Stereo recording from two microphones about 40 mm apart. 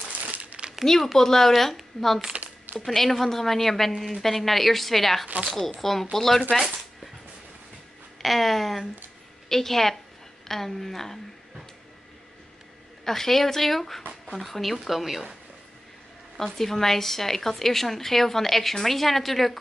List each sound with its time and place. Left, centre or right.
0.2 s crumpling: right
0.8 s a woman's voice: centre
2.3 s a sound: right
2.8 s a woman's voice: centre
8.2 s a woman's voice: centre
13.0 s a woman's voice: centre
16.5 s a woman's voice: centre